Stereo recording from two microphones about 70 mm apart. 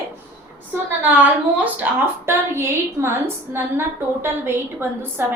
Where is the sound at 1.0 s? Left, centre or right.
Right.